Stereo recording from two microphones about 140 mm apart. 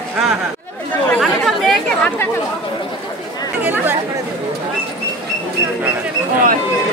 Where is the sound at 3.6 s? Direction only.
15° right (ahead or behind).